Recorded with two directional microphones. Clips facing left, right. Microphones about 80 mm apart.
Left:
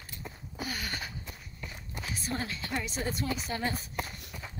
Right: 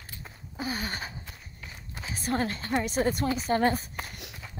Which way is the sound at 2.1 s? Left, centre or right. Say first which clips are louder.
Right 8 dB; right.